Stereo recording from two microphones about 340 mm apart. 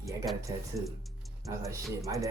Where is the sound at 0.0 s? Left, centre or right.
Centre.